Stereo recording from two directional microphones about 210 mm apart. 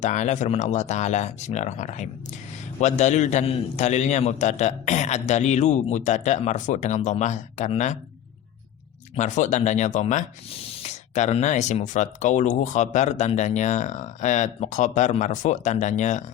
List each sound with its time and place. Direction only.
0.0 s speech: 35° left (ahead or behind)
9.1 s speech: 35° left (ahead or behind)